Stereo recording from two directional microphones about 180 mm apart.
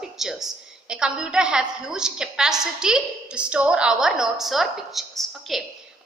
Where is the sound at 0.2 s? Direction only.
Centre (ahead or behind).